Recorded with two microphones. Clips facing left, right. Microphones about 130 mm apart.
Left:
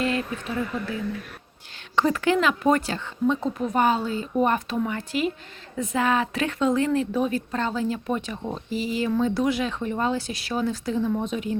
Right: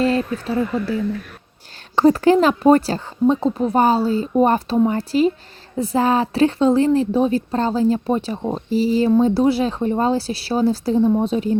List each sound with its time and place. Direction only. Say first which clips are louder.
0.0 s a woman's voice: right 7 dB; 35° right (ahead or behind)
2.0 s a woman's voice: right 8 dB; 35° right (ahead or behind)